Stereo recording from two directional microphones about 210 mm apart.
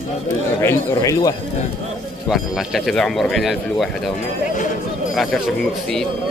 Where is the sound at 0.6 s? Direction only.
15° left (ahead or behind).